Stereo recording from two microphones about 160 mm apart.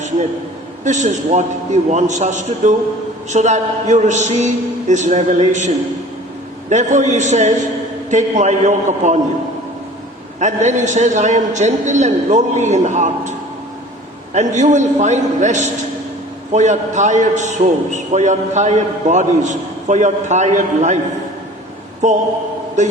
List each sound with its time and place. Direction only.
0.9 s a man's voice: 50° right (ahead or behind)
10.4 s a man's voice: 50° right (ahead or behind)
14.3 s a man's voice: 50° right (ahead or behind)
22.0 s a man's voice: 50° right (ahead or behind)